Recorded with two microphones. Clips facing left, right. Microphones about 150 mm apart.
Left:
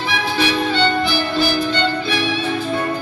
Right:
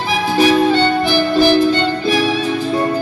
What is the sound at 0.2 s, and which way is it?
Music, 45° right (ahead or behind).